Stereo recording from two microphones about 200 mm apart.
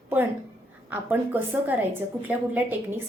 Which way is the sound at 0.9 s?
10° right (ahead or behind).